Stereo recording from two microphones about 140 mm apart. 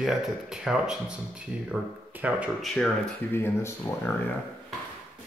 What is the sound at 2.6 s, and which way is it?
Speech, 5° left (ahead or behind).